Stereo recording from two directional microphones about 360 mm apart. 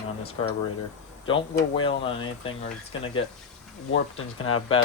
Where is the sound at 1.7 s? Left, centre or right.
Centre.